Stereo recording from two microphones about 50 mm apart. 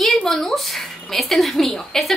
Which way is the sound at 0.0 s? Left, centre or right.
Centre.